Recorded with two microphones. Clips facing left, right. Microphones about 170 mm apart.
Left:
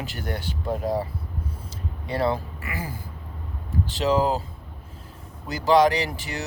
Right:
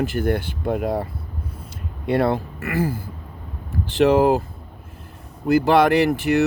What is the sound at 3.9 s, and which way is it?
Speech, 55° right (ahead or behind).